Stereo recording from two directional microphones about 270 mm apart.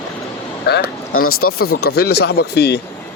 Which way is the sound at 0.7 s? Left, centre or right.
Left.